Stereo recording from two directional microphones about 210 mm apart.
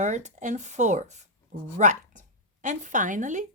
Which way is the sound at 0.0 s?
35° right (ahead or behind).